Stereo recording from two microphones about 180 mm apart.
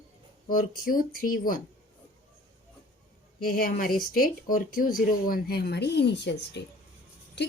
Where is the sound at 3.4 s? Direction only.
55° left (ahead or behind).